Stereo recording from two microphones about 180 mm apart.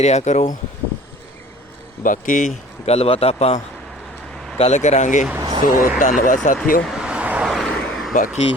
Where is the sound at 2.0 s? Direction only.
45° left (ahead or behind).